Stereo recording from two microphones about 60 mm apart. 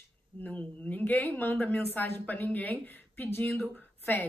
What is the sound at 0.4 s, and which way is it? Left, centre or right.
A woman's voice, left.